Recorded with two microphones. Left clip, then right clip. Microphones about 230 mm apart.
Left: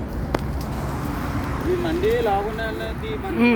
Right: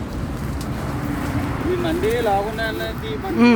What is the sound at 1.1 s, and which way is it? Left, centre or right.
Vehicle, right.